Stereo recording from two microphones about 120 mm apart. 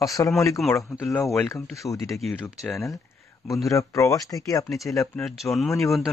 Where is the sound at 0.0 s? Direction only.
30° left (ahead or behind).